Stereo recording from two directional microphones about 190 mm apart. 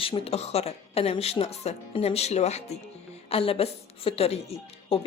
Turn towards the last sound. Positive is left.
turn(degrees=30)  # may be behind; listen again after turning